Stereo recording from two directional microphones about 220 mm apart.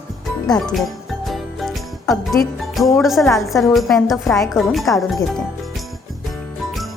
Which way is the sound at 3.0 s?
Centre (ahead or behind).